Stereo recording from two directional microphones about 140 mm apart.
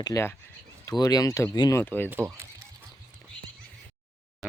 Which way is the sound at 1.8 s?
15° left (ahead or behind).